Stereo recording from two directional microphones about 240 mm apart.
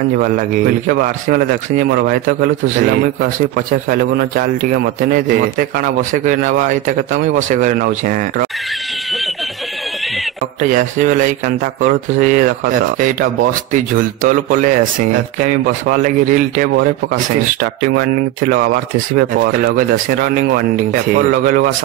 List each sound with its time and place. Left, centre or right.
0.8 s speech: right
10.6 s speech: right
18.5 s speech: right